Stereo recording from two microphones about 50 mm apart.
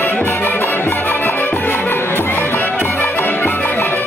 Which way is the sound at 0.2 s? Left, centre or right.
Left.